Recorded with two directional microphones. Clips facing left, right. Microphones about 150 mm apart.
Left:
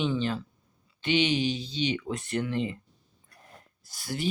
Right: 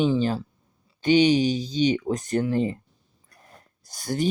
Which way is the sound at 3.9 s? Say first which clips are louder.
Right 7 dB; 45° right (ahead or behind).